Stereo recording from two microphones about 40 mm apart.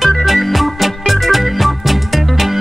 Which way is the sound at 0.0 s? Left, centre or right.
Centre.